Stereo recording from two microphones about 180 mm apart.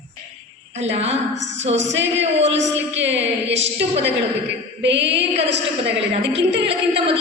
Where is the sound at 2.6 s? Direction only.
85° right.